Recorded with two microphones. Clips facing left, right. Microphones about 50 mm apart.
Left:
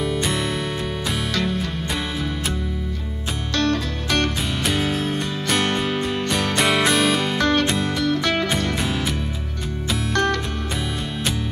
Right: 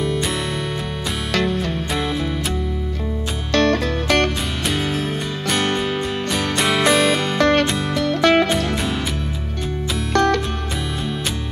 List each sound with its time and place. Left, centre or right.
0.0 s music: centre
1.3 s music: right
3.5 s music: right
4.6 s music: centre
7.3 s music: right
10.1 s music: right